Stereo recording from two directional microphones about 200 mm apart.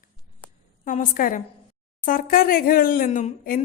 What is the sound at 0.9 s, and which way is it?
A woman's voice, 45° left (ahead or behind).